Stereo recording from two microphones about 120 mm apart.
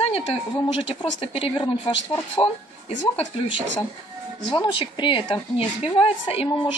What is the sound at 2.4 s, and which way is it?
Speech, 35° left (ahead or behind).